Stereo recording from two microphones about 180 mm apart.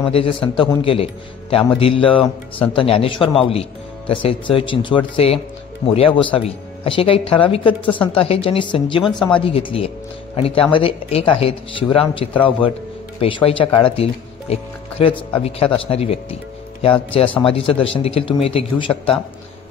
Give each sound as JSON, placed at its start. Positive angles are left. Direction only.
{"t": 0.0, "sound": "a man's voice", "side_deg": 30}